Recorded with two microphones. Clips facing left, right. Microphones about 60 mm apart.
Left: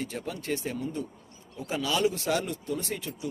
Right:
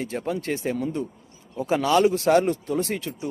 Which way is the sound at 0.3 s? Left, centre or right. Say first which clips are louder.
Right 6 dB; right.